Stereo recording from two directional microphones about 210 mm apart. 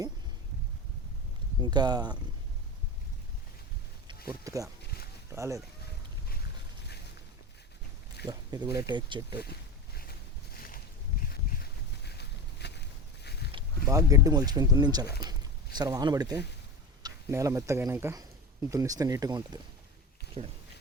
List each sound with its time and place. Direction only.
1.6 s speech: 20° right (ahead or behind)
4.3 s speech: 15° right (ahead or behind)
8.3 s speech: 15° right (ahead or behind)
9.4 s a sound: 50° left (ahead or behind)
13.9 s speech: 15° right (ahead or behind)
15.0 s speech: 50° left (ahead or behind)
15.3 s speech: 20° right (ahead or behind)